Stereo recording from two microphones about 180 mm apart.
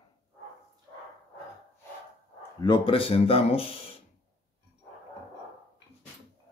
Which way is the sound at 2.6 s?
25° left (ahead or behind).